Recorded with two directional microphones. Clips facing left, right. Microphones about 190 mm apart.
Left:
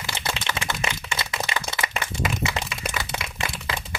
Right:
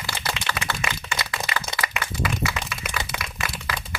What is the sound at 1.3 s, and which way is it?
Clapping, 20° left (ahead or behind).